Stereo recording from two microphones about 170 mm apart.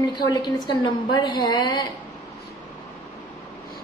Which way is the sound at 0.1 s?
25° left (ahead or behind).